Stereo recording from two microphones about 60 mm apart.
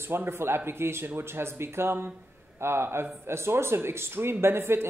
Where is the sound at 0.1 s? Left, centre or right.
Right.